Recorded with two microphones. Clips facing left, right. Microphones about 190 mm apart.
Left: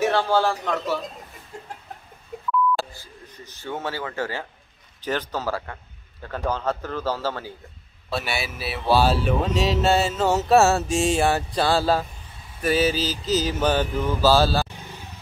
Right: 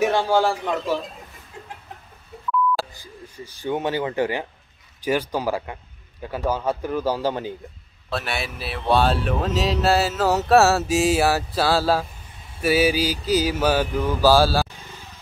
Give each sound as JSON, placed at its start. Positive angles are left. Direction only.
{"t": 0.0, "sound": "a man's voice", "side_deg": -15}
{"t": 2.9, "sound": "speech", "side_deg": -15}
{"t": 8.1, "sound": "speech", "side_deg": 0}